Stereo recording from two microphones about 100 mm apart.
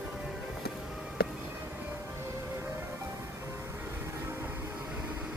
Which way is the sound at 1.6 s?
20° right (ahead or behind).